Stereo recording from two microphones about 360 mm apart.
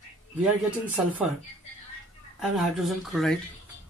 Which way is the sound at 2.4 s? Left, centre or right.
Centre.